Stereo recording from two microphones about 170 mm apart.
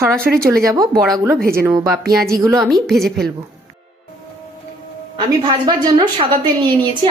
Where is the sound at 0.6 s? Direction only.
20° right (ahead or behind).